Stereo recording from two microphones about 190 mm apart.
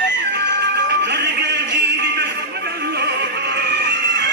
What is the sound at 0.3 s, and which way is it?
Music, 65° right (ahead or behind).